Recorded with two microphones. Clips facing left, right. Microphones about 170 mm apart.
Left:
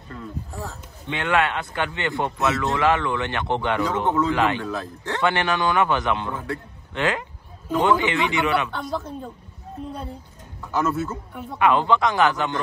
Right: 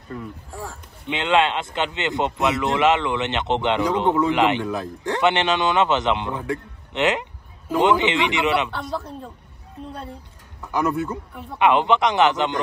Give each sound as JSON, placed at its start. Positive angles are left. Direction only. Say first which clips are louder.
{"t": 0.2, "sound": "speech", "louder": "left 1 dB", "side_deg": -10}
{"t": 8.9, "sound": "a woman's voice", "louder": "left 1 dB", "side_deg": 0}
{"t": 10.7, "sound": "a man's voice", "louder": "right 1 dB", "side_deg": -15}